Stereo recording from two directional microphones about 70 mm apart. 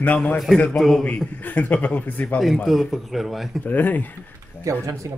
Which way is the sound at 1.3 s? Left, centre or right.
Left.